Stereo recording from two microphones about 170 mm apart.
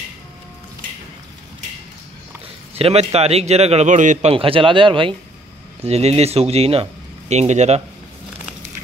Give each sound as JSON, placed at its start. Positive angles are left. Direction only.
{"t": 2.8, "sound": "a man's voice", "side_deg": -35}